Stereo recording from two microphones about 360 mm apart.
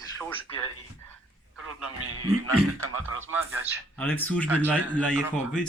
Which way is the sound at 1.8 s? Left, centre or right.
Right.